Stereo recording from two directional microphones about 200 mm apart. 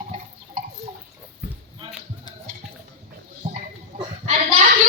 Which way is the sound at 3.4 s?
40° right (ahead or behind).